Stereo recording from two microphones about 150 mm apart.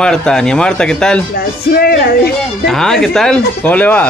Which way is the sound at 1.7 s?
90° left.